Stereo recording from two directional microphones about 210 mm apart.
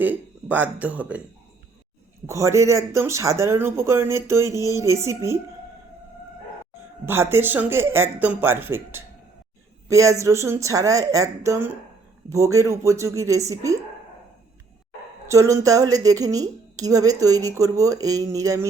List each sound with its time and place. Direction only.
0.0 s speech: 10° right (ahead or behind)
2.2 s a woman's voice: 15° right (ahead or behind)
7.0 s a woman's voice: 10° right (ahead or behind)
15.3 s a woman's voice: 15° right (ahead or behind)